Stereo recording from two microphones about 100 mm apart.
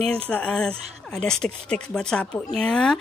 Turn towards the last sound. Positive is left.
turn(degrees=5)  # may be behind; listen again after turning